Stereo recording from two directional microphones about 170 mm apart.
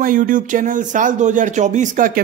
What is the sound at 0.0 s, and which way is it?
Speech, 50° right (ahead or behind).